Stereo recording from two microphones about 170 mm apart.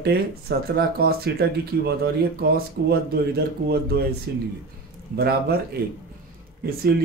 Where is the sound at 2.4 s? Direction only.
65° right (ahead or behind).